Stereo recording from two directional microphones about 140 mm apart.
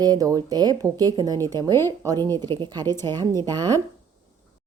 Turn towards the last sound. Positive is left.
turn(degrees=-30)  # may be behind; listen again after turning